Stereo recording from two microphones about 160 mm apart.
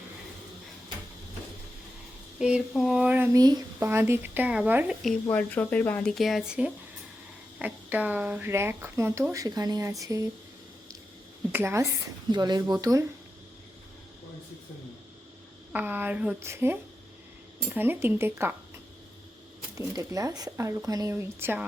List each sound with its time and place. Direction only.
2.4 s speech: 5° right (ahead or behind)
5.2 s speech: 10° left (ahead or behind); by 10.2 s 20° right (ahead or behind)
11.5 s speech: 15° right (ahead or behind)
12.3 s speech: 25° right (ahead or behind)
15.7 s speech: 10° right (ahead or behind)
19.7 s speech: 20° right (ahead or behind)